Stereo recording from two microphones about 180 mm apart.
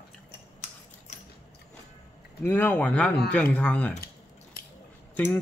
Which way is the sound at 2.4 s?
10° left (ahead or behind).